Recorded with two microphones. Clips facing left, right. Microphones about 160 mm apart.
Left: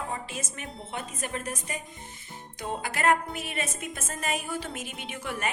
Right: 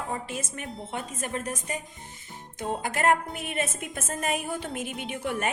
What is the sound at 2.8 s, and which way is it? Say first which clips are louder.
Music: right 1 dB; 45° right (ahead or behind).